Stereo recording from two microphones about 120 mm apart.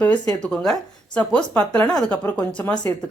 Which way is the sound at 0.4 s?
5° left (ahead or behind).